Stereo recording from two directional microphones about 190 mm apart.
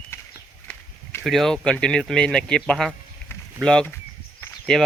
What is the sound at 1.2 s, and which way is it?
Speech, centre (ahead or behind).